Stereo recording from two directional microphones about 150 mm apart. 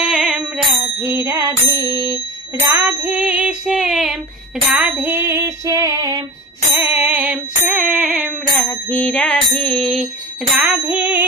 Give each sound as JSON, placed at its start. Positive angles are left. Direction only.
{"t": 0.0, "sound": "music", "side_deg": -5}
{"t": 0.9, "sound": "bicycle bell", "side_deg": -15}
{"t": 2.7, "sound": "music", "side_deg": -15}
{"t": 6.8, "sound": "music", "side_deg": -15}
{"t": 8.6, "sound": "music", "side_deg": 10}
{"t": 10.6, "sound": "music", "side_deg": -15}